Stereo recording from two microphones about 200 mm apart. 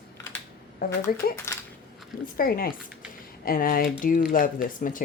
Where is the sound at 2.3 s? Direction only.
45° left (ahead or behind).